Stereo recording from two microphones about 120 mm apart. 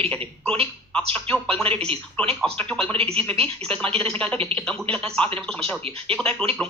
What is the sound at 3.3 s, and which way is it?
Speech, 10° left (ahead or behind).